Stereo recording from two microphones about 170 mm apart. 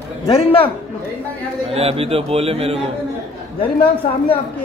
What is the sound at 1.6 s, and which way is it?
A man's voice, 35° right (ahead or behind).